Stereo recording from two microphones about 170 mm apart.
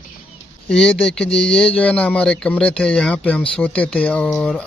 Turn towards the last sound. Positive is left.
turn(degrees=0)  # may be behind; listen again after turning